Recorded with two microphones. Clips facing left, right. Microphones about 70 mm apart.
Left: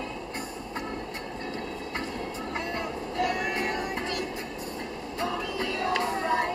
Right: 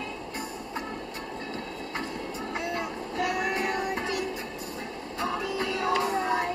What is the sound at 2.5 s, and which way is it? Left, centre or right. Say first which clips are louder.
Vehicle: right 1 dB; centre.